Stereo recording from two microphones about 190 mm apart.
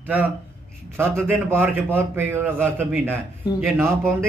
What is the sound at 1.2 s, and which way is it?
A man's voice, 10° right (ahead or behind).